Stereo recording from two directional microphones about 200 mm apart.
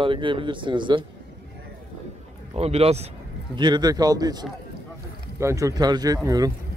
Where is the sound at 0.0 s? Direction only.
25° right (ahead or behind).